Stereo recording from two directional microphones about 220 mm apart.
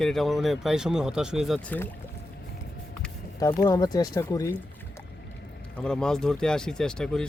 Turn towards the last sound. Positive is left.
turn(degrees=5)  # may be behind; listen again after turning